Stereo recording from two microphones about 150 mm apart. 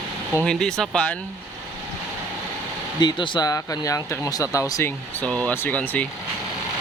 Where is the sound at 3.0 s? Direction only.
30° left (ahead or behind).